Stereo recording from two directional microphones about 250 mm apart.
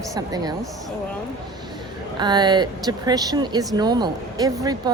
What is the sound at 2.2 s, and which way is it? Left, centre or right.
Speech, centre.